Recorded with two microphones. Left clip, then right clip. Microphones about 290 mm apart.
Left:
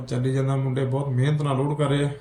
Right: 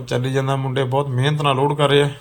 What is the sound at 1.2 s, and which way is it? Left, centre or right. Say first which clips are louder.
Speech: right 6 dB; centre.